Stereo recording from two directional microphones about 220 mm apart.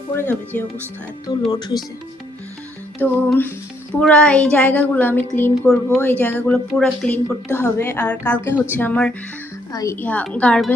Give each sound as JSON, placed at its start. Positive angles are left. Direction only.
{"t": 0.1, "sound": "speech", "side_deg": 10}
{"t": 3.0, "sound": "a woman's voice", "side_deg": 10}